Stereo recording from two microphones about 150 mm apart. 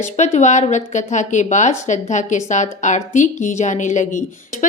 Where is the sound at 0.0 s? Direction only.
50° left (ahead or behind).